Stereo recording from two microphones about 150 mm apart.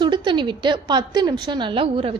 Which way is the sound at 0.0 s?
30° right (ahead or behind).